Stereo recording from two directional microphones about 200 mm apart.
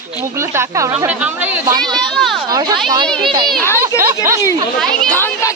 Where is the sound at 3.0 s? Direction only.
5° left (ahead or behind).